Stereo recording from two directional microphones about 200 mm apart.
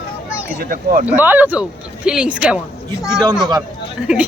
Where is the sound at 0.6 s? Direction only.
50° right (ahead or behind).